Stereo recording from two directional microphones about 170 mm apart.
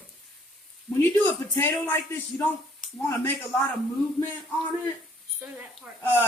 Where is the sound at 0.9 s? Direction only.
10° left (ahead or behind).